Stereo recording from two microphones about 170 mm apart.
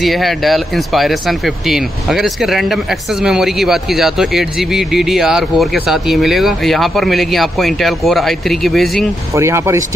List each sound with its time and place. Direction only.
0.0 s speech: centre (ahead or behind)
9.3 s speech: 15° right (ahead or behind)